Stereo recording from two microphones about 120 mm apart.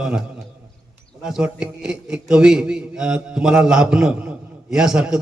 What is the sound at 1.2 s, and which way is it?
A man's voice, 5° right (ahead or behind).